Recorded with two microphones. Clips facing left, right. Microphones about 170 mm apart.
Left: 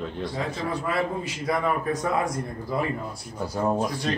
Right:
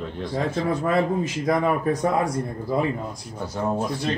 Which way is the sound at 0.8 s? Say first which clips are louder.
Right 5 dB; 40° right (ahead or behind).